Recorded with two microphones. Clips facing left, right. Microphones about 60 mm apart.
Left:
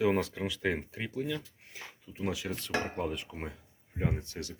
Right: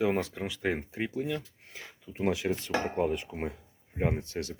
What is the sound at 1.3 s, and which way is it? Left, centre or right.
Speech, right.